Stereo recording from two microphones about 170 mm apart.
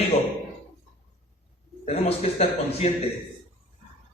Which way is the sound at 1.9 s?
40° left (ahead or behind).